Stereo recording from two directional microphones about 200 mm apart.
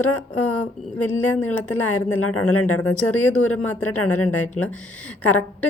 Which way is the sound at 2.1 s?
90° left.